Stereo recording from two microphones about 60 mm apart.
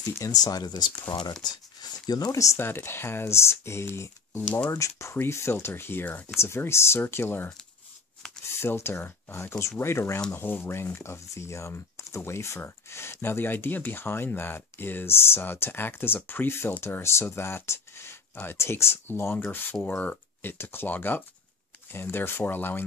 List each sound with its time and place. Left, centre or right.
0.2 s speech: left
2.1 s speech: left
2.6 s speech: left
4.4 s speech: left
4.6 s speech: left
5.1 s speech: left
6.2 s speech: left
8.5 s speech: left
9.6 s speech: left
10.3 s speech: left
11.0 s speech: left